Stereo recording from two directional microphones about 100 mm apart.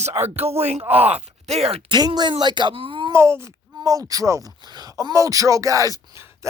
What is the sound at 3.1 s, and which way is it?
Speech, 25° right (ahead or behind).